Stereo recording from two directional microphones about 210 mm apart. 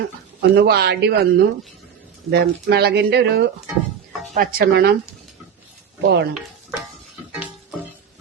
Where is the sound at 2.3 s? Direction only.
50° right (ahead or behind).